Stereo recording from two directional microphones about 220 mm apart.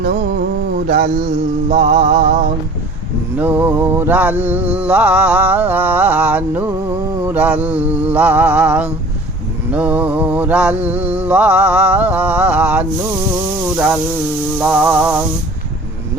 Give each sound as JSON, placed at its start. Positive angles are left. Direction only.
{"t": 0.0, "sound": "mantra", "side_deg": -45}
{"t": 1.8, "sound": "music", "side_deg": -30}
{"t": 2.1, "sound": "a sound", "side_deg": -40}
{"t": 3.3, "sound": "mantra", "side_deg": -10}
{"t": 13.7, "sound": "a sound", "side_deg": -5}
{"t": 14.6, "sound": "mantra", "side_deg": -5}